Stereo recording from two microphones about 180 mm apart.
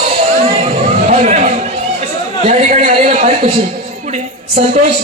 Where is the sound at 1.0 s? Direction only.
40° right (ahead or behind).